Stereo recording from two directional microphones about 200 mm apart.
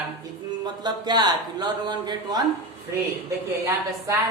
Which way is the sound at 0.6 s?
20° right (ahead or behind).